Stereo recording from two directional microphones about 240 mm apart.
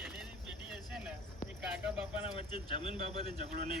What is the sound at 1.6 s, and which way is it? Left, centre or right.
Speech, centre.